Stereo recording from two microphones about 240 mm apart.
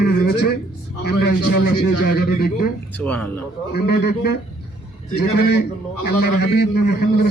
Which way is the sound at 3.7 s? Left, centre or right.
Left.